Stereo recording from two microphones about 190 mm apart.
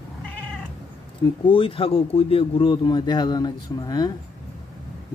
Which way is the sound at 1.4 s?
25° left (ahead or behind).